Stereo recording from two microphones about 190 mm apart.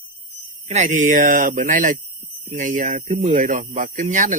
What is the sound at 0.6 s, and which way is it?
Speech, 35° right (ahead or behind).